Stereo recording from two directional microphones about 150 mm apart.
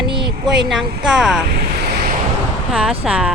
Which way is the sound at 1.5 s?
90° right.